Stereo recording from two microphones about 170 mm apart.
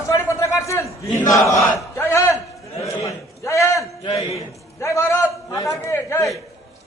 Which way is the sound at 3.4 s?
20° left (ahead or behind).